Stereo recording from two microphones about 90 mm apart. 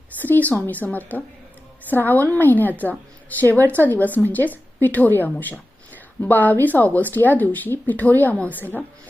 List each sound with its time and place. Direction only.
0.2 s a woman's voice: 20° left (ahead or behind)